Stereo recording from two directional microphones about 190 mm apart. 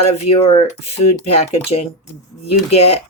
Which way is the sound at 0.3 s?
35° left (ahead or behind).